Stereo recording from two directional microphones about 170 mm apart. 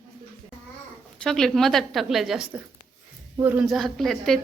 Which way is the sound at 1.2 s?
5° left (ahead or behind).